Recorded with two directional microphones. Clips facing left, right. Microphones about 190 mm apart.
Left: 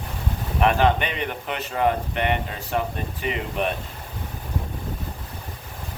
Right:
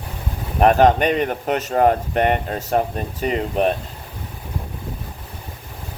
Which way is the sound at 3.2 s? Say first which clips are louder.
Right 7 dB; 40° right (ahead or behind).